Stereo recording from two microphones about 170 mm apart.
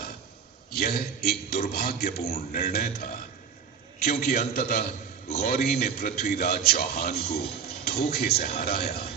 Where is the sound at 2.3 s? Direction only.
50° left (ahead or behind).